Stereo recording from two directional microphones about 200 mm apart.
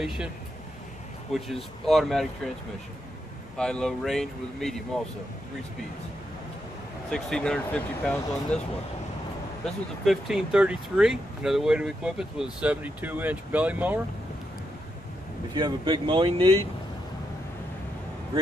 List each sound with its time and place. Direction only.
1.3 s speech: centre (ahead or behind)
3.5 s speech: 5° left (ahead or behind)
7.1 s speech: 5° left (ahead or behind)
10.0 s speech: centre (ahead or behind)
15.5 s speech: 25° right (ahead or behind)